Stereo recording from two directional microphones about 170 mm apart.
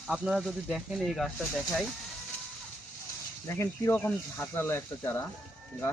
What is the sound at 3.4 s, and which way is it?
Speech, 15° left (ahead or behind).